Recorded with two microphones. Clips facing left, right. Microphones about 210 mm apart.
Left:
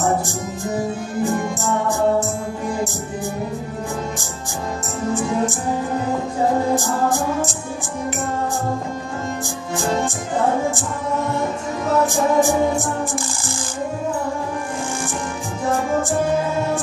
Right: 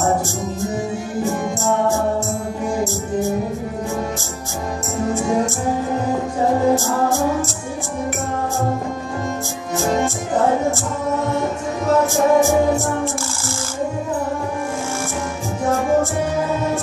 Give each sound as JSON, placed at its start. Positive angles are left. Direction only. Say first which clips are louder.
{"t": 1.9, "sound": "music", "louder": "left 1 dB", "side_deg": 15}
{"t": 6.7, "sound": "music", "louder": "right 2 dB", "side_deg": 15}
{"t": 12.1, "sound": "music", "louder": "right 2 dB", "side_deg": 15}